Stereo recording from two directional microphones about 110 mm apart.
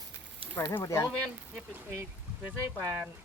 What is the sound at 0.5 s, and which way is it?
Speech, 20° left (ahead or behind).